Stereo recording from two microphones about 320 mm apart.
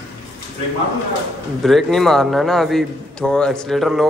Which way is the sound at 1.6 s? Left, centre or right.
Centre.